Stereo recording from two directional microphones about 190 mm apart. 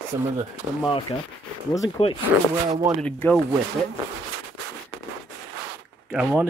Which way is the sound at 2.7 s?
15° right (ahead or behind).